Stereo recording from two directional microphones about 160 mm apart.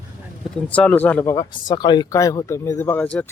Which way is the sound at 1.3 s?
25° left (ahead or behind).